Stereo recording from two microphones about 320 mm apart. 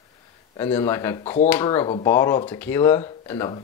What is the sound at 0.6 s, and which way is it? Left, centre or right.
Speech, centre.